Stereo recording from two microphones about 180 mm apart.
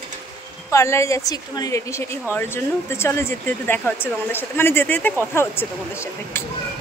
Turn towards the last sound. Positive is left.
turn(degrees=15)  # may be behind; listen again after turning